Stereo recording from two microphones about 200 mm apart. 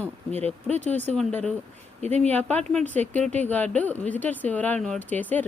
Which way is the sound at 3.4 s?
10° left (ahead or behind).